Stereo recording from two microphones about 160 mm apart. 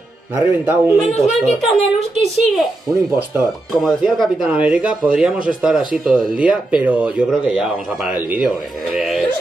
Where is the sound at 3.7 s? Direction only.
Centre (ahead or behind).